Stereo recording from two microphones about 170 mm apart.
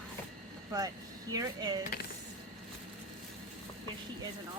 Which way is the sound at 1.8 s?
60° left (ahead or behind).